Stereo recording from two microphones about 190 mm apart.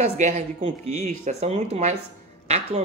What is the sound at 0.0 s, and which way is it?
Speech, 40° right (ahead or behind).